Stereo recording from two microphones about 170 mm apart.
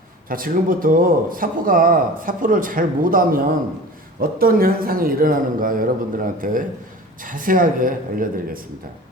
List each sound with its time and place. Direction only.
0.3 s speech: 55° right (ahead or behind)